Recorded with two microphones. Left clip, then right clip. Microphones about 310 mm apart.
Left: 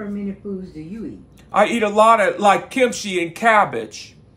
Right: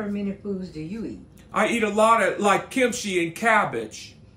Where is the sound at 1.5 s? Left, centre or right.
Centre.